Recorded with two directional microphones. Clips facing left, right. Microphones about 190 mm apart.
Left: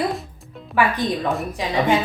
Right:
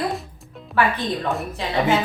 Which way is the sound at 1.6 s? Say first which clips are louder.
Left 2 dB; 15° left (ahead or behind).